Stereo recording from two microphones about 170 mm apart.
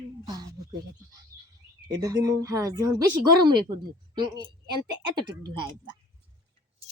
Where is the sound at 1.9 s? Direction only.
20° right (ahead or behind).